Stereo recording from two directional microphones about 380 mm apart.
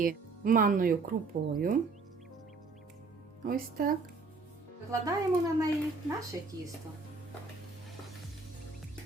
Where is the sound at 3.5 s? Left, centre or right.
Right.